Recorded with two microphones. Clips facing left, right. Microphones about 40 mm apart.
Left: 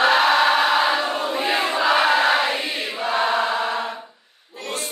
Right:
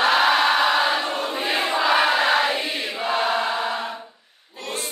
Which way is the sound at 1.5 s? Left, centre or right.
Centre.